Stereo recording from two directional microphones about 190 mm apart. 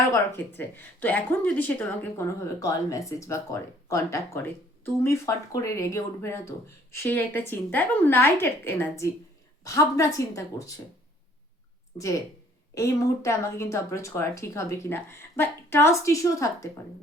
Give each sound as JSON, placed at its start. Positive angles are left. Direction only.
{"t": 0.1, "sound": "speech", "side_deg": 10}
{"t": 11.9, "sound": "speech", "side_deg": 25}